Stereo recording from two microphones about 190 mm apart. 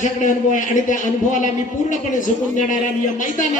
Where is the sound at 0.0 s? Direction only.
40° left (ahead or behind).